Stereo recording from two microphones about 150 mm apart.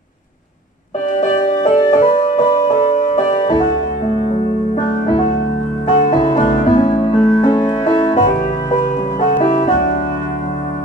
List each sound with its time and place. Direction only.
1.6 s music: 30° left (ahead or behind)
2.0 s music: 55° left (ahead or behind)
5.9 s music: 55° left (ahead or behind)
6.7 s music: 35° left (ahead or behind)
8.1 s music: 55° left (ahead or behind)